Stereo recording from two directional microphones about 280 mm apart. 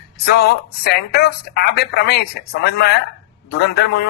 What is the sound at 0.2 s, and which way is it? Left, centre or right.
Speech, left.